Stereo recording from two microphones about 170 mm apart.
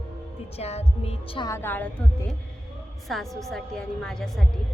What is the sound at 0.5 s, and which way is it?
Speech, 40° left (ahead or behind).